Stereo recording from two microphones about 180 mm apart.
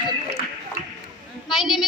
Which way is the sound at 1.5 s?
Centre (ahead or behind).